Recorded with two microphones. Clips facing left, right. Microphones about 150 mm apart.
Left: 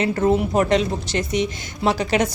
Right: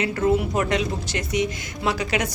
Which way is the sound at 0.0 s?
30° left (ahead or behind).